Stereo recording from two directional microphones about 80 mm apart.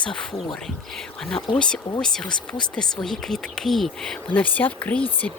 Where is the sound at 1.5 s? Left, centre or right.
Centre.